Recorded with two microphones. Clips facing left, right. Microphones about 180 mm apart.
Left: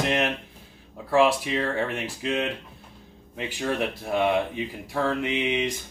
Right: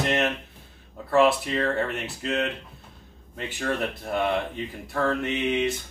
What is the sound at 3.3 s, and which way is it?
Speech, 10° left (ahead or behind).